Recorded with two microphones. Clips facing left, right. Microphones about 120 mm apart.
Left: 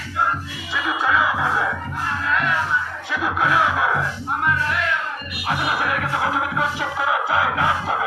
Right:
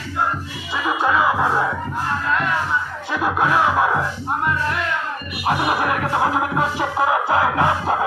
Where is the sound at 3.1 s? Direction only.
30° right (ahead or behind).